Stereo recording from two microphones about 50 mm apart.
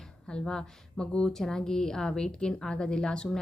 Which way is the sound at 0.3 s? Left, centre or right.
Centre.